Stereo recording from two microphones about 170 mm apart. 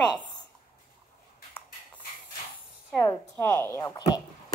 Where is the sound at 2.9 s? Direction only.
15° left (ahead or behind).